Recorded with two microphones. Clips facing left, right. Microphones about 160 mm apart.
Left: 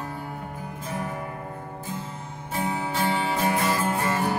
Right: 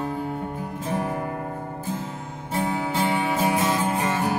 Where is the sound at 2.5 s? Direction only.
25° right (ahead or behind).